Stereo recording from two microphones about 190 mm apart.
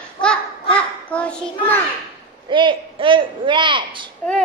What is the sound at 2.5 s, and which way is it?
A man's voice, 25° right (ahead or behind).